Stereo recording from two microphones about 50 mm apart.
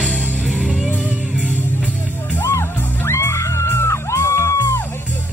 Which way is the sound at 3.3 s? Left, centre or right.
Left.